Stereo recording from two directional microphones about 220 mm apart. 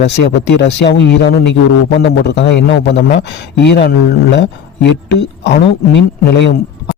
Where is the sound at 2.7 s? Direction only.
50° left (ahead or behind).